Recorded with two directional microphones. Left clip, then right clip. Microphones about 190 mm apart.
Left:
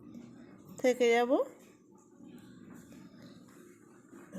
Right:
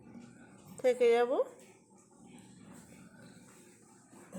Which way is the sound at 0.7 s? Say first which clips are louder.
Even; 5° left (ahead or behind).